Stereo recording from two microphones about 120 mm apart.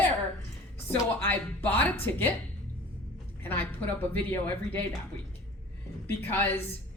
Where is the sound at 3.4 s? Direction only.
15° left (ahead or behind).